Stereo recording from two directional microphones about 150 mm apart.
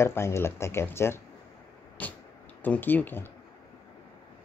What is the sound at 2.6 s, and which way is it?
Speech, 10° left (ahead or behind).